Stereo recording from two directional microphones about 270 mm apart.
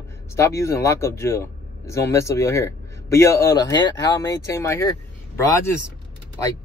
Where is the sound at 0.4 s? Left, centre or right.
Centre.